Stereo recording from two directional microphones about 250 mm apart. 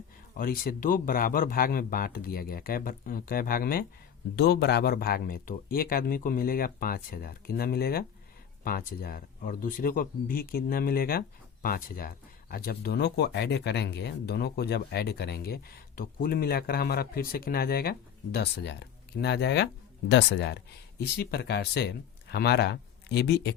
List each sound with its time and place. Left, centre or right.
0.3 s speech: left